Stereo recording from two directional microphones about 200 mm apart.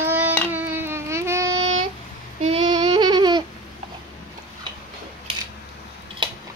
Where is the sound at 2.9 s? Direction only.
20° right (ahead or behind).